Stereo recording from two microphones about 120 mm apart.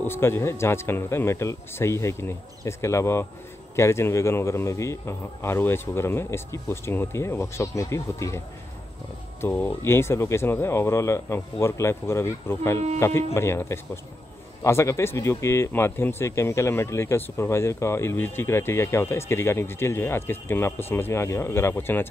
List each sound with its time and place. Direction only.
0.0 s speech: 20° left (ahead or behind)
9.4 s speech: 15° left (ahead or behind)